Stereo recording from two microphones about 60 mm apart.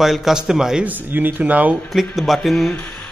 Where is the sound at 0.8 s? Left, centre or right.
Right.